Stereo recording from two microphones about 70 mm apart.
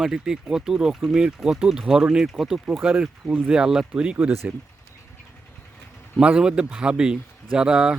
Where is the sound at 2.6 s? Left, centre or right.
Centre.